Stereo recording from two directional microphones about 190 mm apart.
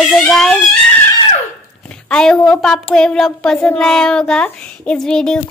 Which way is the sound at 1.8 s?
5° left (ahead or behind).